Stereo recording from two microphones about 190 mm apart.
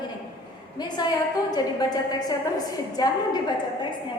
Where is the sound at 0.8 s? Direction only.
20° left (ahead or behind).